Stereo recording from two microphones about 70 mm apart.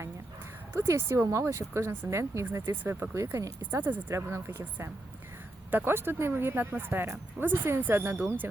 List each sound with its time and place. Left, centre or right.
0.8 s speech: right